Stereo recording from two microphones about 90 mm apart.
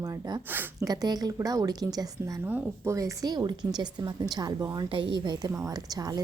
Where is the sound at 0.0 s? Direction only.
45° right (ahead or behind).